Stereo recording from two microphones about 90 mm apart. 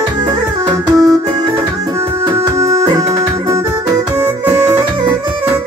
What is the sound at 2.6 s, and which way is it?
Music, 40° right (ahead or behind).